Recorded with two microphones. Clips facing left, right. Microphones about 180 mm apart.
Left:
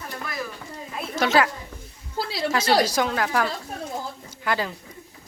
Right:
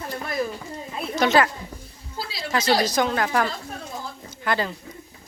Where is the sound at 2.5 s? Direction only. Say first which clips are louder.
Even; 10° left (ahead or behind).